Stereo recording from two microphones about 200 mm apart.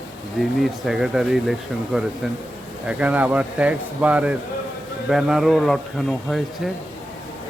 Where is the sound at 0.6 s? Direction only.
Centre (ahead or behind).